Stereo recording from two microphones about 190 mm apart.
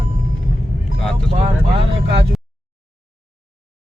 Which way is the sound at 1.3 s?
30° right (ahead or behind).